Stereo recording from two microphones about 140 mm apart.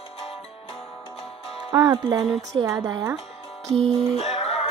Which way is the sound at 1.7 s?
30° right (ahead or behind).